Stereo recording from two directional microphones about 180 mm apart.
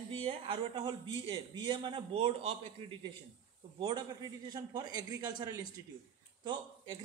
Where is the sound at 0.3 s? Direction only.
25° right (ahead or behind).